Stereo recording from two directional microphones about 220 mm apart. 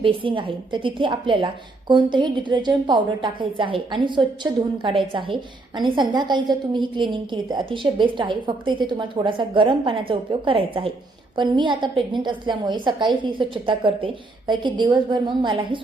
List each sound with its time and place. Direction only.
0.0 s a woman's voice: 25° right (ahead or behind)